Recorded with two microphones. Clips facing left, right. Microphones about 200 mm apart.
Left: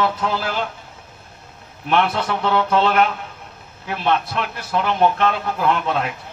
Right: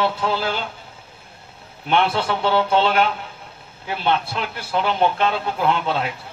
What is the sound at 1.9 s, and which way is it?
Speech, 30° right (ahead or behind).